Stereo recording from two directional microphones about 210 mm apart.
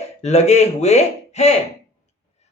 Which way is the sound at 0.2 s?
30° left (ahead or behind).